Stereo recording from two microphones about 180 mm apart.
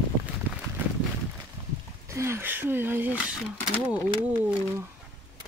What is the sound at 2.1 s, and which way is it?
Speech, 15° right (ahead or behind).